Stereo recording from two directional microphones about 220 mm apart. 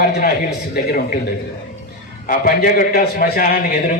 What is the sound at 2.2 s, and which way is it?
A man's voice, 40° left (ahead or behind).